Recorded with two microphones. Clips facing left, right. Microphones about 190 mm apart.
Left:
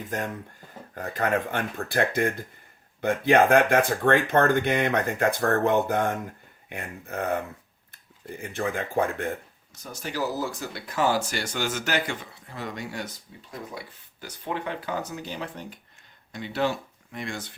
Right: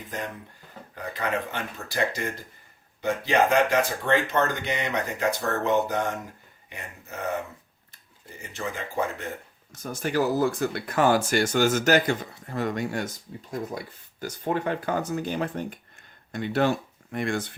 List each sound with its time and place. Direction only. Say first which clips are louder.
0.1 s speech: left 3 dB; 45° left (ahead or behind)
9.7 s speech: right 6 dB; 50° right (ahead or behind)